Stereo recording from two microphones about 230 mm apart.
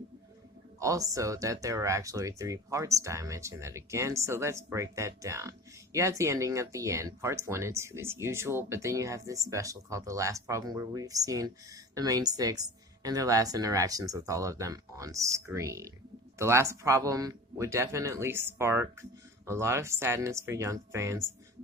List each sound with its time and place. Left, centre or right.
0.8 s speech: centre